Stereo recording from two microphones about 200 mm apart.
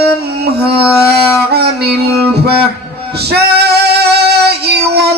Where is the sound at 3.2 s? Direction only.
55° right (ahead or behind).